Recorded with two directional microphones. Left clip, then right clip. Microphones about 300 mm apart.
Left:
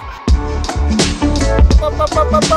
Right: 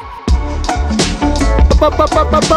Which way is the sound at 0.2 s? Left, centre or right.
Centre.